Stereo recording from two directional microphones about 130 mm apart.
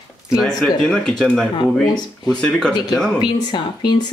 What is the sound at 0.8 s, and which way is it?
Speech, 5° left (ahead or behind).